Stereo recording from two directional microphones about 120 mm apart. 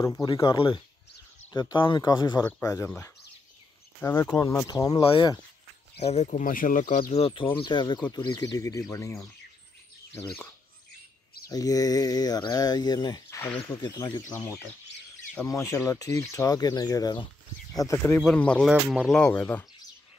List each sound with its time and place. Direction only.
0.0 s speech: 30° left (ahead or behind)
0.4 s speech: 45° left (ahead or behind)
2.6 s speech: 25° left (ahead or behind)
4.0 s speech: 20° left (ahead or behind)
5.0 s speech: 45° left (ahead or behind)
5.9 s speech: 65° left (ahead or behind); by 7.2 s 90° left
7.2 s speech: 50° left (ahead or behind); by 8.8 s 30° left (ahead or behind)
11.4 s speech: 30° left (ahead or behind)
14.3 s speech: 20° left (ahead or behind)
17.7 s speech: 25° left (ahead or behind)